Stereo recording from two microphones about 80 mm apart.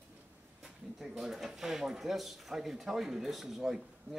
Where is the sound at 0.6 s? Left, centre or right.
Centre.